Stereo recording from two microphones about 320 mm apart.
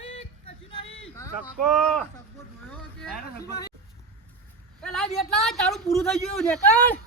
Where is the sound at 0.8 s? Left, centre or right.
Left.